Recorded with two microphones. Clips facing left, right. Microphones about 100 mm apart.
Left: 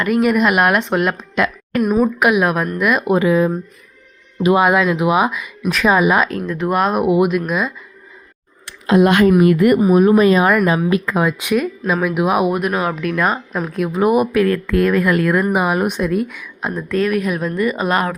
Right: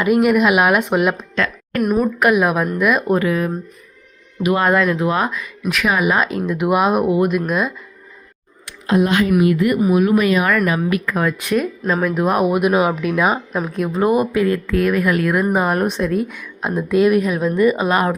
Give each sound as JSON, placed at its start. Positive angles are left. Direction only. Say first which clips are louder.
{"t": 0.0, "sound": "speech", "louder": "right 1 dB", "side_deg": -5}
{"t": 3.1, "sound": "speech", "louder": "left 3 dB", "side_deg": 20}
{"t": 4.5, "sound": "speech", "louder": "left 1 dB", "side_deg": 5}
{"t": 5.8, "sound": "speech", "louder": "left 4 dB", "side_deg": 25}
{"t": 6.3, "sound": "speech", "louder": "right 1 dB", "side_deg": -10}
{"t": 8.9, "sound": "a woman's voice", "louder": "left 4 dB", "side_deg": 80}
{"t": 9.4, "sound": "speech", "louder": "left 3 dB", "side_deg": 55}
{"t": 9.8, "sound": "speech", "louder": "left 2 dB", "side_deg": 35}
{"t": 11.5, "sound": "speech", "louder": "even", "side_deg": 0}
{"t": 14.0, "sound": "speech", "louder": "left 2 dB", "side_deg": 10}
{"t": 14.3, "sound": "speech", "louder": "left 2 dB", "side_deg": -20}
{"t": 14.7, "sound": "speech", "louder": "left 2 dB", "side_deg": -5}
{"t": 16.7, "sound": "speech", "louder": "right 4 dB", "side_deg": -10}